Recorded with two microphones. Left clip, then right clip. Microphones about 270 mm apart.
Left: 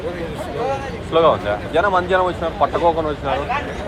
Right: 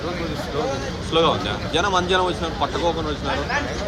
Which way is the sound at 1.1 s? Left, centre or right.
Centre.